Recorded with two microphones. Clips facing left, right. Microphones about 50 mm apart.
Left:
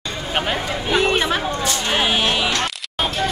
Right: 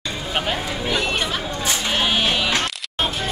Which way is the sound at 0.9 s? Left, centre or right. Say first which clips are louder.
Left 6 dB; left.